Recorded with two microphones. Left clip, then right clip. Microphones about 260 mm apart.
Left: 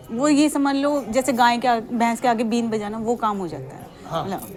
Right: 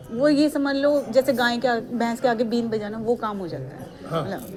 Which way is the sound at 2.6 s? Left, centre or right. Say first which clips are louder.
Left 1 dB; left.